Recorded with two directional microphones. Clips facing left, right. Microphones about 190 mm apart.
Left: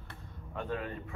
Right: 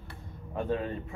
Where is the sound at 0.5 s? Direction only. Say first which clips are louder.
Right 6 dB; 25° right (ahead or behind).